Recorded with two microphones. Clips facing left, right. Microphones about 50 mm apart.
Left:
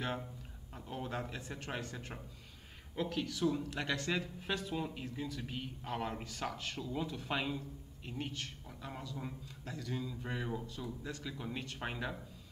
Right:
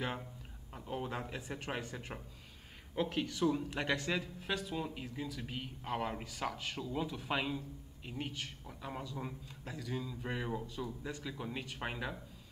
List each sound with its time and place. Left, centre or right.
0.8 s speech: centre